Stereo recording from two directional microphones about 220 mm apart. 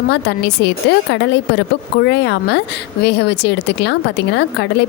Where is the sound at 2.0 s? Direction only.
50° left (ahead or behind).